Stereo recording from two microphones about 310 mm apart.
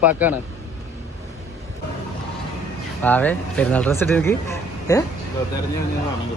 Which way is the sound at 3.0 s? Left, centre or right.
Centre.